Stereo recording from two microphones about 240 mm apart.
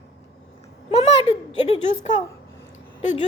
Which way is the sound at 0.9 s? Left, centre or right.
Left.